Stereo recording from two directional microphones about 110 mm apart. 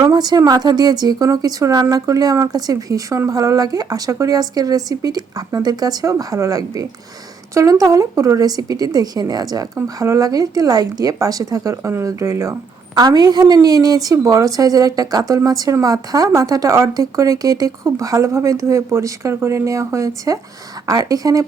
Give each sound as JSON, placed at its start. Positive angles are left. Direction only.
{"t": 0.0, "sound": "a woman's voice", "side_deg": -35}
{"t": 12.9, "sound": "a woman's voice", "side_deg": -40}